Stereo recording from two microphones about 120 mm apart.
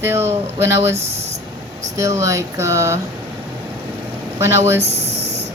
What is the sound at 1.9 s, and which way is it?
Speech, 25° right (ahead or behind).